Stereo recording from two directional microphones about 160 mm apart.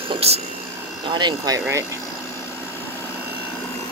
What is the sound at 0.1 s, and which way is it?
Speech, 40° right (ahead or behind).